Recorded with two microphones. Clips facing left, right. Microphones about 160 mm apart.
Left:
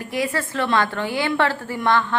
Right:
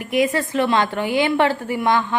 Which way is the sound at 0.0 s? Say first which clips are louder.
Right 5 dB; 20° right (ahead or behind).